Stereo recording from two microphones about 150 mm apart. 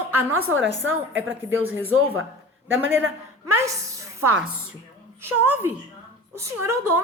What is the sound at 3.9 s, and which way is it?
Music, 20° right (ahead or behind).